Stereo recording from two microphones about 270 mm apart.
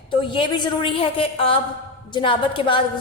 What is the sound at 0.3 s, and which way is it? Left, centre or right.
A woman's voice, centre.